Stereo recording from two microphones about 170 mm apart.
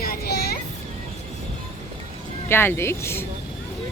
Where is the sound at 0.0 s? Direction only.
60° left (ahead or behind).